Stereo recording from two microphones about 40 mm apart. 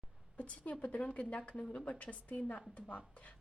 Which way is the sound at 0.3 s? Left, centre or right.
Left.